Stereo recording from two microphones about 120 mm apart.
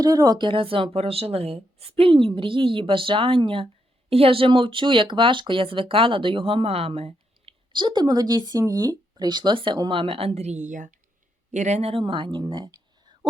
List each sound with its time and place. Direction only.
0.0 s speech: 30° right (ahead or behind)
10.0 s a woman's voice: 50° right (ahead or behind); by 10.9 s 90° right
11.5 s speech: 75° right (ahead or behind); by 12.7 s 40° right (ahead or behind)